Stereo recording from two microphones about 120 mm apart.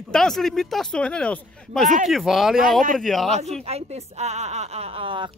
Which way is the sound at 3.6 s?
60° right (ahead or behind).